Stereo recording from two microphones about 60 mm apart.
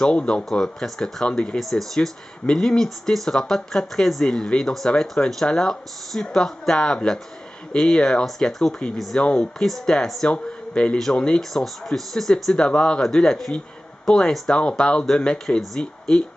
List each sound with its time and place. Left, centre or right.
0.0 s speech: centre
10.3 s speech: centre
11.5 s speech: centre